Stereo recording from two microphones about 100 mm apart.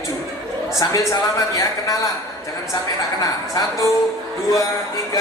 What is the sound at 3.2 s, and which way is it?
Speech, 35° left (ahead or behind).